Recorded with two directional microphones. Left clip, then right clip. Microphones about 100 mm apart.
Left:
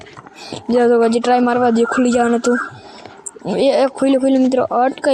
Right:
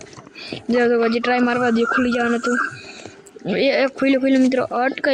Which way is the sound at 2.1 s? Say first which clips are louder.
Left 5 dB; 55° left (ahead or behind).